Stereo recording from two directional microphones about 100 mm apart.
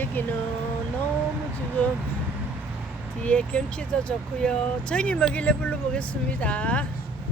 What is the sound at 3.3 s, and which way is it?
Speech, 10° left (ahead or behind).